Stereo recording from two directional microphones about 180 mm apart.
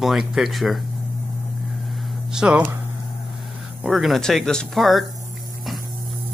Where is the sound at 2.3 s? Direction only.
5° right (ahead or behind).